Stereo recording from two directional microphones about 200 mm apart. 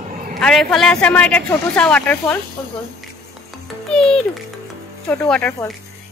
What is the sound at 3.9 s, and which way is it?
A child's voice, 5° left (ahead or behind).